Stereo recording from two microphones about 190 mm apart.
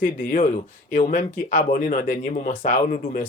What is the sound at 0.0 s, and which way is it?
Speech, 45° left (ahead or behind).